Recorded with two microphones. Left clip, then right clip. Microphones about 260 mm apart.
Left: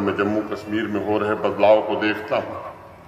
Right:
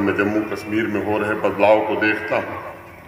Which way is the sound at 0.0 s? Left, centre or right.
Right.